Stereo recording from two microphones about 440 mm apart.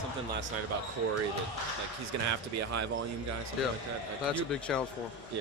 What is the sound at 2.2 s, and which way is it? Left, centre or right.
Speech, right.